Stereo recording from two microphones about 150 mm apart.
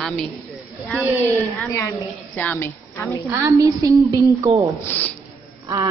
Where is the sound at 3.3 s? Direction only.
20° right (ahead or behind).